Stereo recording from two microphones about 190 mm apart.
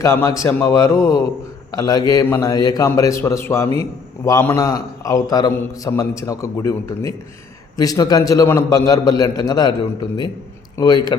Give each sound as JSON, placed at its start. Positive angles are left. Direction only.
{"t": 0.0, "sound": "a man's voice", "side_deg": 15}